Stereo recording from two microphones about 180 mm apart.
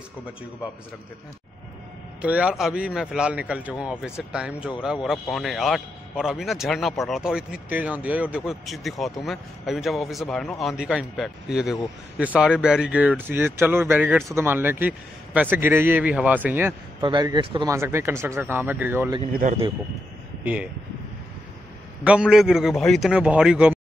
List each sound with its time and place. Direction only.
2.2 s a man's voice: 5° right (ahead or behind)
17.0 s speech: 25° right (ahead or behind)
17.6 s speech: 15° right (ahead or behind)
19.4 s a man's voice: 45° right (ahead or behind)
22.0 s a man's voice: 5° right (ahead or behind)